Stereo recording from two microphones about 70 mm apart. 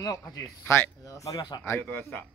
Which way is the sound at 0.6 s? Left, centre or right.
Left.